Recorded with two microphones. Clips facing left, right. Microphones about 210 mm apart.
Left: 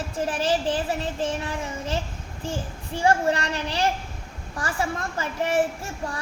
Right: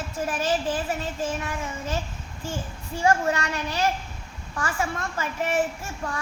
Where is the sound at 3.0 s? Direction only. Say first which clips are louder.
Left 1 dB; 30° left (ahead or behind).